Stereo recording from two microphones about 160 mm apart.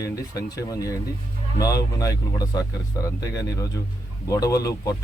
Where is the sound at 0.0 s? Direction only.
20° left (ahead or behind).